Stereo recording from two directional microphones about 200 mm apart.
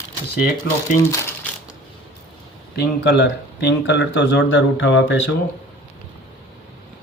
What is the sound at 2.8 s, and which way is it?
Speech, 60° left (ahead or behind).